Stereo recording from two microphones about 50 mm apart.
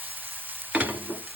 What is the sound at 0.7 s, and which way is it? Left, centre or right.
Stir, right.